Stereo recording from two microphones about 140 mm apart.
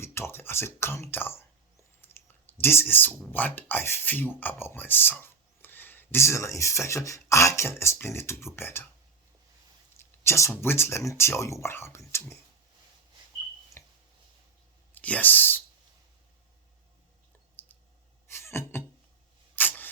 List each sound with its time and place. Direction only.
0.0 s speech: 15° left (ahead or behind)
2.0 s clicking: 15° left (ahead or behind)
3.3 s speech: 15° left (ahead or behind)
10.0 s speech: 20° left (ahead or behind)
13.8 s a sound: 20° left (ahead or behind)
14.9 s speech: 10° left (ahead or behind)
17.6 s clicking: 15° left (ahead or behind)
18.3 s music: 20° left (ahead or behind)
19.5 s a sound: 15° left (ahead or behind)